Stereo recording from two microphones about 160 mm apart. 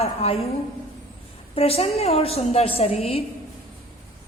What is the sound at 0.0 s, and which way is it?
Speech, 40° left (ahead or behind).